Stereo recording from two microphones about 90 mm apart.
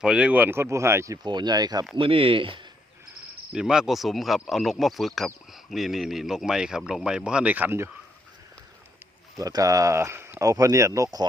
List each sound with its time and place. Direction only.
0.0 s speech: 10° right (ahead or behind); by 1.2 s 35° right (ahead or behind)
1.2 s speech: 55° right (ahead or behind)
2.0 s speech: 90° right
3.5 s speech: 5° right (ahead or behind)
9.4 s speech: 40° right (ahead or behind)